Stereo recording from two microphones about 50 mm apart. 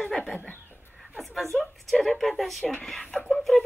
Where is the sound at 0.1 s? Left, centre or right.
Centre.